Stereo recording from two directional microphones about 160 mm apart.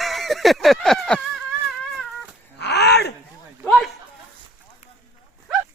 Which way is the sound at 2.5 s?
90° left.